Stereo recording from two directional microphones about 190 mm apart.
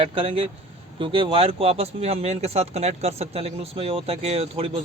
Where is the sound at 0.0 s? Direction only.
30° right (ahead or behind).